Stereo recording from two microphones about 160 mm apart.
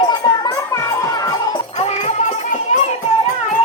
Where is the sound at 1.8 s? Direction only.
45° left (ahead or behind).